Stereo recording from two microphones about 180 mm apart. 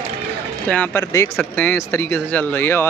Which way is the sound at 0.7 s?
10° left (ahead or behind).